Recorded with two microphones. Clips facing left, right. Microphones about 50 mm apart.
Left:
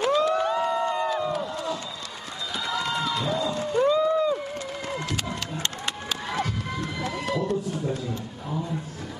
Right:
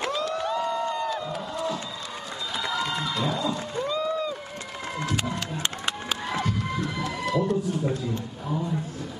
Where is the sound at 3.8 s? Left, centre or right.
Left.